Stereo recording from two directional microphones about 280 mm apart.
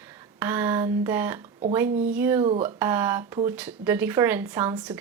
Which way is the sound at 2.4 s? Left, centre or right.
Right.